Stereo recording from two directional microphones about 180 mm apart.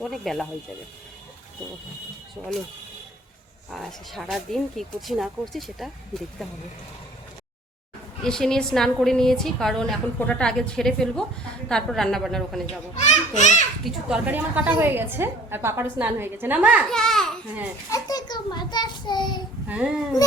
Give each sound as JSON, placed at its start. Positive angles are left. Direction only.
{"t": 0.0, "sound": "a woman's voice", "side_deg": 0}
{"t": 3.7, "sound": "a woman's voice", "side_deg": 0}
{"t": 8.2, "sound": "a woman's voice", "side_deg": 5}
{"t": 12.6, "sound": "a child's voice", "side_deg": 40}
{"t": 13.8, "sound": "a woman's voice", "side_deg": -5}
{"t": 16.9, "sound": "a sound", "side_deg": 0}
{"t": 17.9, "sound": "a sound", "side_deg": 20}
{"t": 19.6, "sound": "speech", "side_deg": -5}